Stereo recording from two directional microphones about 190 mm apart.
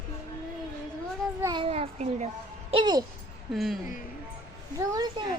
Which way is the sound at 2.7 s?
20° right (ahead or behind).